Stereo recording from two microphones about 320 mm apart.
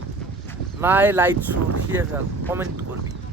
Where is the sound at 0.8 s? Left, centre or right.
Centre.